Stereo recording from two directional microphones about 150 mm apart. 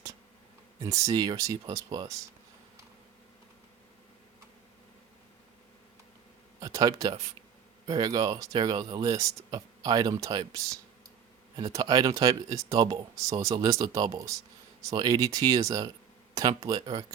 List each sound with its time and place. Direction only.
0.8 s speech: 20° right (ahead or behind)
6.6 s speech: 25° right (ahead or behind)